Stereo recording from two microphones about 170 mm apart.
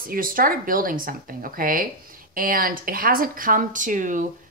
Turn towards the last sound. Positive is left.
turn(degrees=-50)  # may be behind; listen again after turning